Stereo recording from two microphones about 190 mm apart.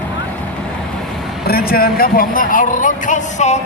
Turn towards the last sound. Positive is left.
turn(degrees=35)  # may be behind; listen again after turning